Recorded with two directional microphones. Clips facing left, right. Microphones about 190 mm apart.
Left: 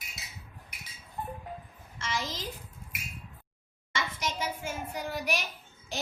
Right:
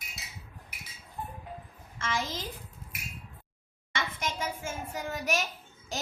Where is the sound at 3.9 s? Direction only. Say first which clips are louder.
Even; 50° right (ahead or behind).